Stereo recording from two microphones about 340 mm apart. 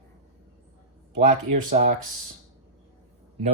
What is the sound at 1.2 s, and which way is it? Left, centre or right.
Speech, right.